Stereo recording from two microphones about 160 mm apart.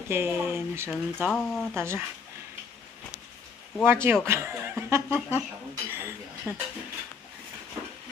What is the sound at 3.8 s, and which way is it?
Speech, 15° right (ahead or behind).